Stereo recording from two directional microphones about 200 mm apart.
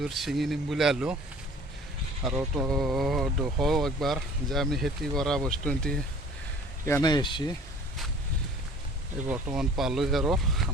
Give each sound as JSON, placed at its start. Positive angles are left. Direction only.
{"t": 0.0, "sound": "speech", "side_deg": 0}
{"t": 2.2, "sound": "speech", "side_deg": 0}
{"t": 6.8, "sound": "speech", "side_deg": 15}
{"t": 9.6, "sound": "speech", "side_deg": 0}